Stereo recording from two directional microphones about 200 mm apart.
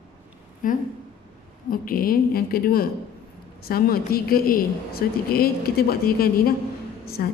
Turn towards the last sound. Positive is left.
turn(degrees=45)  # may be behind; listen again after turning